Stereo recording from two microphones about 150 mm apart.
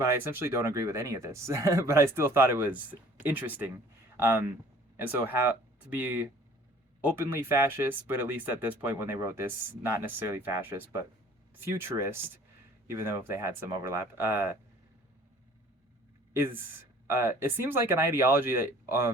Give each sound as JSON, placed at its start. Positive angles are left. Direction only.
{"t": 0.0, "sound": "speech", "side_deg": -15}
{"t": 16.3, "sound": "speech", "side_deg": -15}